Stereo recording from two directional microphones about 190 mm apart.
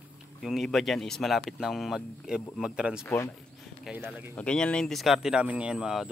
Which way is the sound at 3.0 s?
15° left (ahead or behind).